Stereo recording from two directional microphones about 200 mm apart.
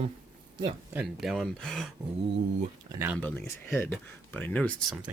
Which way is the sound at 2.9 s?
10° right (ahead or behind).